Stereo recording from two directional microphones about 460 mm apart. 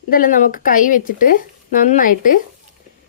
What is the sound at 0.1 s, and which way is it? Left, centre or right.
Speech, centre.